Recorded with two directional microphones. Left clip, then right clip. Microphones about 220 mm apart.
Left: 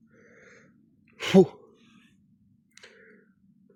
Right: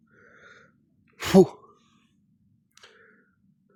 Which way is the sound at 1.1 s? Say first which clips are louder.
Right 2 dB; 25° right (ahead or behind).